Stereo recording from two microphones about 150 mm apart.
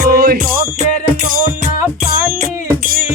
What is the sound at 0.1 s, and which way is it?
Music, 90° right.